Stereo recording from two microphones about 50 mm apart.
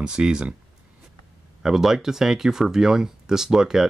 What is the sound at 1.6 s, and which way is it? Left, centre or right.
Speech, centre.